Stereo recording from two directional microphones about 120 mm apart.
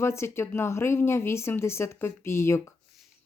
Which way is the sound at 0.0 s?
20° left (ahead or behind).